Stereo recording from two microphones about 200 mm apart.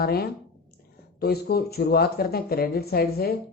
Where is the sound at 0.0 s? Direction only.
50° left (ahead or behind).